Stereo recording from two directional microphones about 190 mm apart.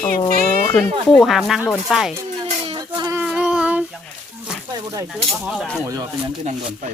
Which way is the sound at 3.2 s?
5° right (ahead or behind).